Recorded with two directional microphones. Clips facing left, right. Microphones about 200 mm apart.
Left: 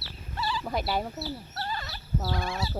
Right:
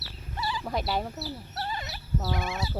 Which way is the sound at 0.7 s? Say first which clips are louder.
Right 1 dB; centre (ahead or behind).